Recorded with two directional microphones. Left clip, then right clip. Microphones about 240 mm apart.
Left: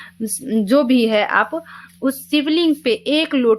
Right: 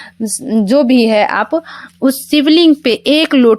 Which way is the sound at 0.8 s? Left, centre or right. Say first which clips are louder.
Right 7 dB; right.